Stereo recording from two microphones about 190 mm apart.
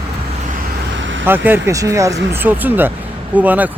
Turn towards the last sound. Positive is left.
turn(degrees=-10)  # may be behind; listen again after turning